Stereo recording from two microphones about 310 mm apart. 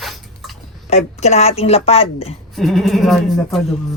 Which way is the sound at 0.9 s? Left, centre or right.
Left.